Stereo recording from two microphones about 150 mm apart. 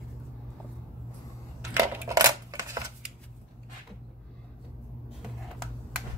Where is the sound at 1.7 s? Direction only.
15° right (ahead or behind).